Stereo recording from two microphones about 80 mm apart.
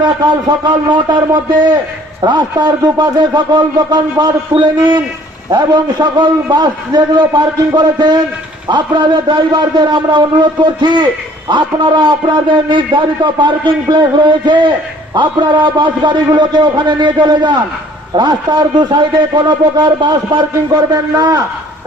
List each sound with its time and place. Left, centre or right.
0.0 s a man's voice: right
11.4 s a man's voice: right
15.1 s a man's voice: right
20.9 s a man's voice: right